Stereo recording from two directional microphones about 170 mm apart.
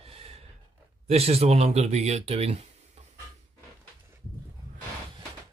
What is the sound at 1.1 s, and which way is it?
Speech, 35° right (ahead or behind).